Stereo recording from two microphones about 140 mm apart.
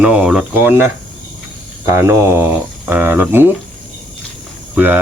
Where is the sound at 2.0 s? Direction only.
20° right (ahead or behind).